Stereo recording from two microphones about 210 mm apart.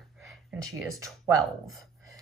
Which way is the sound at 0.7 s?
15° right (ahead or behind).